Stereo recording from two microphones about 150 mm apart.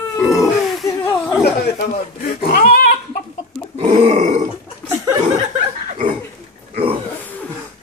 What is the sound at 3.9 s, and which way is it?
Grunt, 45° right (ahead or behind).